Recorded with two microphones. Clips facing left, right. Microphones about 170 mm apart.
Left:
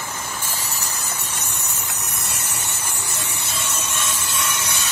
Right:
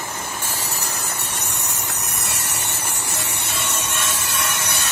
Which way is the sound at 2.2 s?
70° right (ahead or behind).